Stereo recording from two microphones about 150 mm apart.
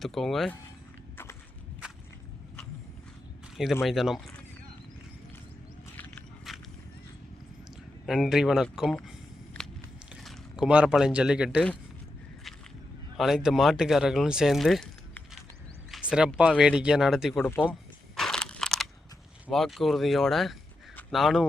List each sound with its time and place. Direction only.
0.0 s speech: centre (ahead or behind)
1.1 s walk: 15° left (ahead or behind)
3.8 s speech: centre (ahead or behind)
6.5 s a sound: centre (ahead or behind)
8.0 s speech: centre (ahead or behind)
13.1 s speech: centre (ahead or behind)
17.4 s speech: 10° left (ahead or behind)
18.2 s a sound: 5° left (ahead or behind)
19.5 s speech: centre (ahead or behind)